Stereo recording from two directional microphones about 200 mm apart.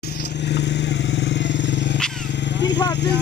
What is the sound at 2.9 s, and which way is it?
Speech, 60° left (ahead or behind).